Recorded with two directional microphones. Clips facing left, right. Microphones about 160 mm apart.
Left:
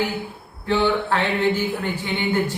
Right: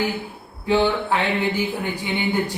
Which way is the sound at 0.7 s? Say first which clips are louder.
Right 1 dB; 15° right (ahead or behind).